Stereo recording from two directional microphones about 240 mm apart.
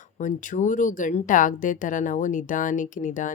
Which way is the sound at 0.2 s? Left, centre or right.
Left.